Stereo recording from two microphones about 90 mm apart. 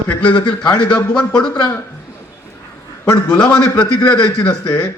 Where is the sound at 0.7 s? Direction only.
10° left (ahead or behind).